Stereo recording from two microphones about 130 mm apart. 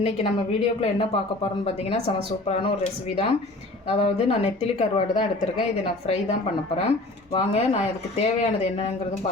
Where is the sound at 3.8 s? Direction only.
50° left (ahead or behind).